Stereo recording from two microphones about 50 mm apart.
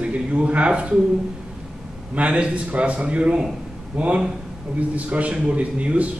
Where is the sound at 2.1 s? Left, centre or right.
Right.